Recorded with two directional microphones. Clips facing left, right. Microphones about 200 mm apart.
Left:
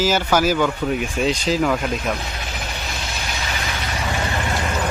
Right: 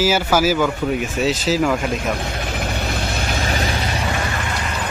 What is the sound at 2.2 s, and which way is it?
Vehicle, 50° right (ahead or behind).